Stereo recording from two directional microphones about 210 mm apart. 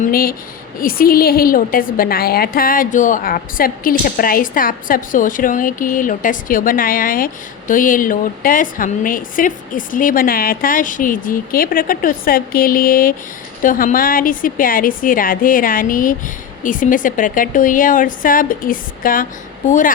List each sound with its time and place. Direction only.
0.0 s a woman's voice: 45° left (ahead or behind)